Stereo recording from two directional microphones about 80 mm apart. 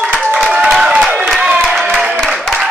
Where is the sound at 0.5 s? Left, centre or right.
Centre.